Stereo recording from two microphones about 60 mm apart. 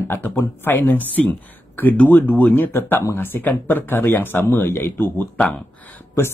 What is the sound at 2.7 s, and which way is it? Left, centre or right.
Speech, left.